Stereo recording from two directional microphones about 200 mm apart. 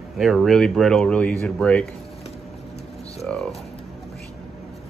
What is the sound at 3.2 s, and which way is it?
Music, centre (ahead or behind).